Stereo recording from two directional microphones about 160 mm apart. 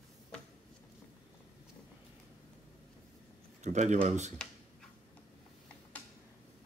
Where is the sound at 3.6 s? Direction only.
50° right (ahead or behind).